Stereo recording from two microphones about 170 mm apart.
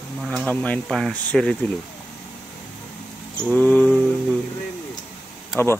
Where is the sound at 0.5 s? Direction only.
5° left (ahead or behind).